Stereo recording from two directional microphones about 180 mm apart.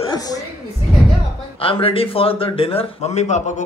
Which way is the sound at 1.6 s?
30° left (ahead or behind).